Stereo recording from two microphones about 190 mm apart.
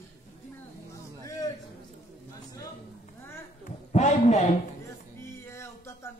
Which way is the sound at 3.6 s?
40° left (ahead or behind).